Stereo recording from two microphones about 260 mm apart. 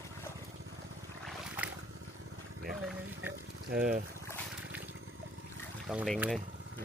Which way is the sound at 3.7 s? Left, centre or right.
Right.